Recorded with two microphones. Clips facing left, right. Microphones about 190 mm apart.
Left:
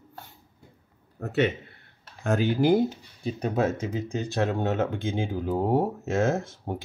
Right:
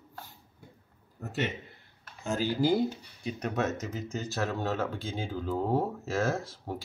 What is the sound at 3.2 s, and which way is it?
Speech, 30° left (ahead or behind).